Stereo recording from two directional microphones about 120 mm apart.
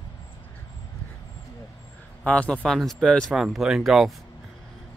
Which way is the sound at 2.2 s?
10° left (ahead or behind).